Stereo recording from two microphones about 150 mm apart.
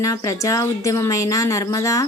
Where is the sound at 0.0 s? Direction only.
20° left (ahead or behind).